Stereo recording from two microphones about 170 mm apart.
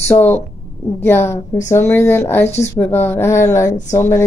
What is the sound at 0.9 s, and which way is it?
Speech, 10° left (ahead or behind).